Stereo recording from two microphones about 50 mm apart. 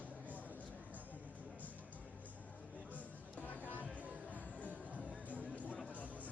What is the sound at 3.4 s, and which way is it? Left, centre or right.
Music, left.